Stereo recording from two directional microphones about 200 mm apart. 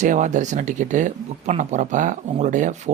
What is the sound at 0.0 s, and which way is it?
Speech, 40° right (ahead or behind).